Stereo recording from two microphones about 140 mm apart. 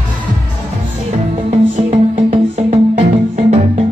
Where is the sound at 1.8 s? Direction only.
45° right (ahead or behind).